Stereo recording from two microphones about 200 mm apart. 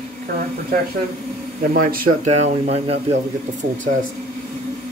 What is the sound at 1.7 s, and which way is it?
Speech, 45° right (ahead or behind).